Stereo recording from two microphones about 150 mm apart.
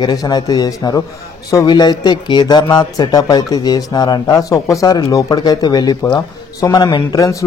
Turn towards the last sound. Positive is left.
turn(degrees=20)  # may be behind; listen again after turning